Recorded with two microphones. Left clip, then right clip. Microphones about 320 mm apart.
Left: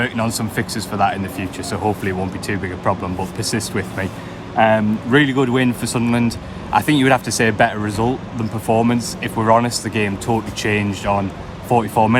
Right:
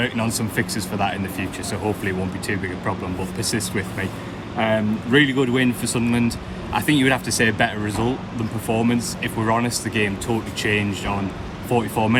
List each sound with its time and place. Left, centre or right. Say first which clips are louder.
0.0 s speech: left 3 dB; centre